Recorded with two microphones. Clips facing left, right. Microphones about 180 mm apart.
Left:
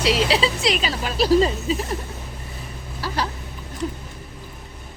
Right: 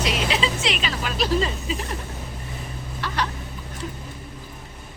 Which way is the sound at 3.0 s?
35° left (ahead or behind).